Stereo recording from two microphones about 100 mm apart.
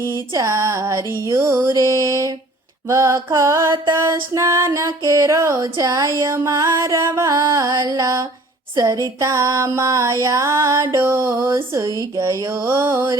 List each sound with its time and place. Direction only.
0.1 s music: 30° right (ahead or behind)
8.7 s a sound: 35° right (ahead or behind)
9.2 s music: 30° right (ahead or behind)